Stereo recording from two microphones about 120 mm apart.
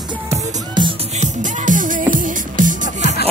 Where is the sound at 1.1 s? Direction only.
85° right.